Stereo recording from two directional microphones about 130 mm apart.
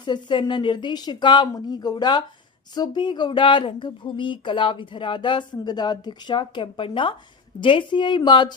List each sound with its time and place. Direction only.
0.0 s speech: 35° left (ahead or behind)